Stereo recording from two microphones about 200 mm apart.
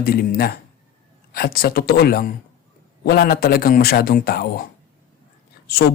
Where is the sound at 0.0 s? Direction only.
50° left (ahead or behind).